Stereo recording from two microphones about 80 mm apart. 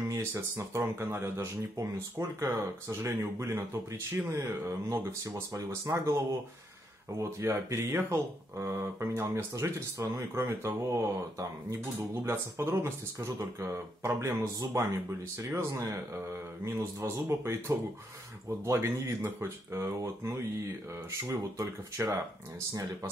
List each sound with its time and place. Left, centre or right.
0.1 s speech: right
4.4 s speech: right
7.2 s speech: right
10.9 s speech: right